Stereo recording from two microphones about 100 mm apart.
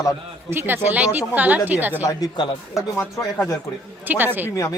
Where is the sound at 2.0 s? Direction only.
35° left (ahead or behind).